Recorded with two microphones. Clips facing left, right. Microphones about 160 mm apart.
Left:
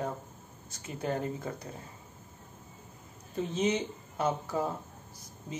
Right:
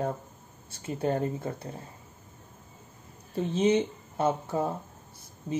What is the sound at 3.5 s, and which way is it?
Speech, 30° right (ahead or behind).